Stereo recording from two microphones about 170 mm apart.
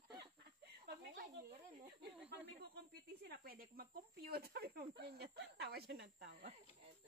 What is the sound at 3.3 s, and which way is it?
Speech, 60° right (ahead or behind).